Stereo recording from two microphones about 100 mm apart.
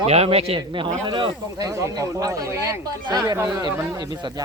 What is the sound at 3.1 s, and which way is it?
Speech, 40° right (ahead or behind).